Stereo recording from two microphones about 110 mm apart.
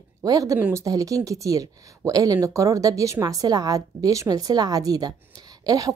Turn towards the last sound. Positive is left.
turn(degrees=-35)  # may be behind; listen again after turning